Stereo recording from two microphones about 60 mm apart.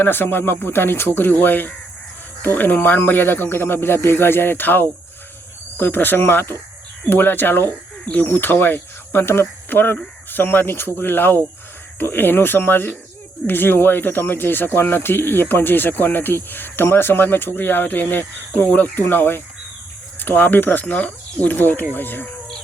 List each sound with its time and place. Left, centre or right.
0.0 s speech: left